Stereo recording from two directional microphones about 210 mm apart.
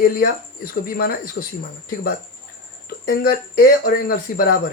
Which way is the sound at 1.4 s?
60° left (ahead or behind).